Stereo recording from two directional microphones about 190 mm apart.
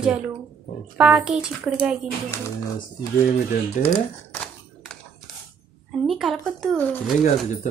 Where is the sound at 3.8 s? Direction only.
5° left (ahead or behind).